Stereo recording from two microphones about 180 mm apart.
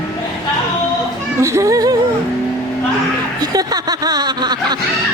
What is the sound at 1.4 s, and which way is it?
Music, 15° right (ahead or behind).